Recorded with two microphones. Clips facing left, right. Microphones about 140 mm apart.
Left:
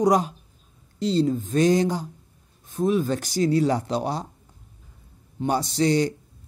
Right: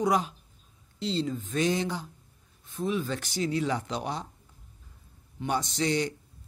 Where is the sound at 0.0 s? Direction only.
40° left (ahead or behind).